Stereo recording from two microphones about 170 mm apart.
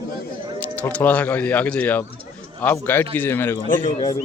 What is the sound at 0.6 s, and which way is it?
Speech, 10° left (ahead or behind).